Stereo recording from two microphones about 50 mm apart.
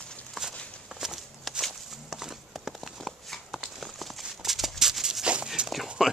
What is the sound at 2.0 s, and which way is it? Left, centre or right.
Horse, centre.